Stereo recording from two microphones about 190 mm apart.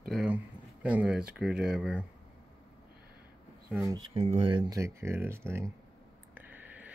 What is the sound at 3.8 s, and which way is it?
Speech, 25° right (ahead or behind).